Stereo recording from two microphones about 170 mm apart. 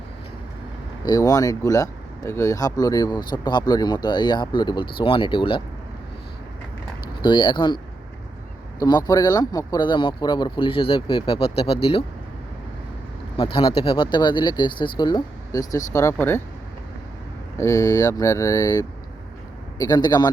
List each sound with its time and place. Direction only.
1.0 s speech: 20° left (ahead or behind)
7.2 s speech: 25° left (ahead or behind)
8.8 s speech: 25° left (ahead or behind)
13.3 s speech: 30° left (ahead or behind); by 16.4 s 15° left (ahead or behind)
17.6 s speech: 20° left (ahead or behind)